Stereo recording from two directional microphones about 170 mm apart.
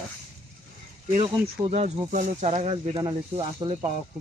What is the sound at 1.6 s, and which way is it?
Speech, 40° right (ahead or behind).